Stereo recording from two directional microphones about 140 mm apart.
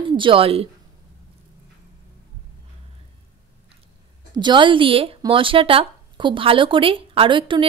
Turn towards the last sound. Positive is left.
turn(degrees=-35)  # may be behind; listen again after turning